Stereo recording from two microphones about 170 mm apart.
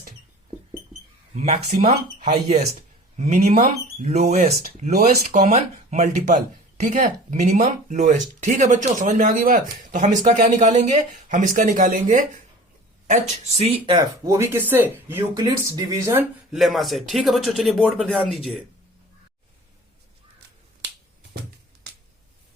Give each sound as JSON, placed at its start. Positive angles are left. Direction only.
{"t": 1.4, "sound": "speech", "side_deg": -40}
{"t": 16.5, "sound": "speech", "side_deg": 0}